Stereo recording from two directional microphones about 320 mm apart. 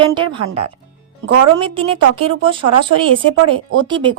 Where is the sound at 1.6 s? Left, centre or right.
Centre.